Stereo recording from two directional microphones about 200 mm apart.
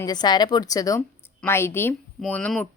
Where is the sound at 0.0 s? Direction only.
20° left (ahead or behind).